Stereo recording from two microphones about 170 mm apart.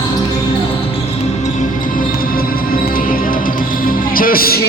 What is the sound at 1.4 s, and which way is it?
Music, 50° left (ahead or behind).